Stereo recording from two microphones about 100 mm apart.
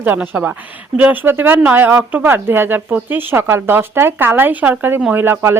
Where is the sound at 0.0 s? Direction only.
15° right (ahead or behind).